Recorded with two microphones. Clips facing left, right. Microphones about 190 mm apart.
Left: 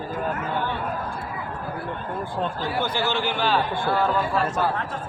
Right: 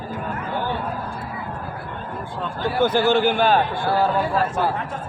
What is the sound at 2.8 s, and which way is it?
Speech, 50° right (ahead or behind).